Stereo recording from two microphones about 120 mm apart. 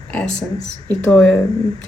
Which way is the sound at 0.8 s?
10° left (ahead or behind).